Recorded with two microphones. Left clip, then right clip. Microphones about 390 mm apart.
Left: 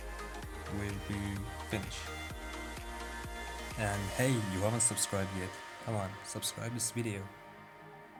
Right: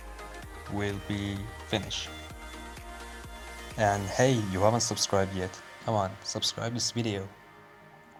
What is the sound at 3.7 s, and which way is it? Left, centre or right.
Speech, left.